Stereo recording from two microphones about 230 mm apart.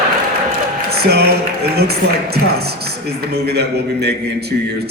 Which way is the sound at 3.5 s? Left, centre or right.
Right.